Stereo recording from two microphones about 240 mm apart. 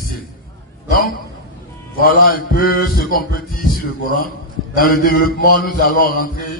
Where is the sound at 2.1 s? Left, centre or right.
Left.